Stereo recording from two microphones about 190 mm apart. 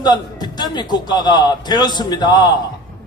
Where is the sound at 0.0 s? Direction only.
20° left (ahead or behind).